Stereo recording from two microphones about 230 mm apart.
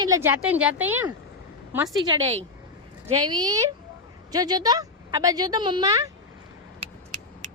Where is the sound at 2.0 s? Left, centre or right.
Right.